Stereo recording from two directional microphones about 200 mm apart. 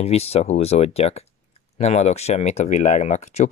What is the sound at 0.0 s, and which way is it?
Speech, 30° left (ahead or behind).